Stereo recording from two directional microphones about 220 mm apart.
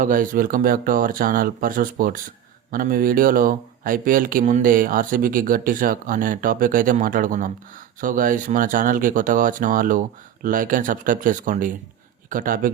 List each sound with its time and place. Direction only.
0.0 s speech: 40° right (ahead or behind)